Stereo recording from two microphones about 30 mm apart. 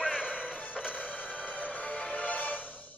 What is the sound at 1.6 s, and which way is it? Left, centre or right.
Music, left.